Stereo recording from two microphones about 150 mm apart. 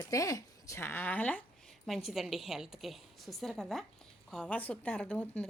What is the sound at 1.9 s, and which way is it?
A woman's voice, centre (ahead or behind).